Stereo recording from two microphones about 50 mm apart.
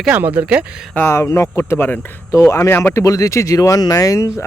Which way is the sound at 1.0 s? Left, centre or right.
Left.